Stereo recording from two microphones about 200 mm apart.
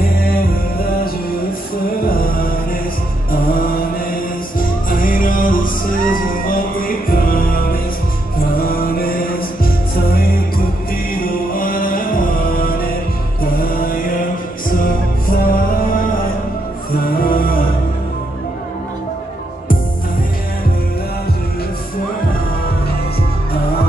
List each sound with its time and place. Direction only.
0.0 s music: 45° left (ahead or behind)
2.0 s music: 45° left (ahead or behind)
15.2 s music: 45° left (ahead or behind)
17.0 s music: 45° left (ahead or behind)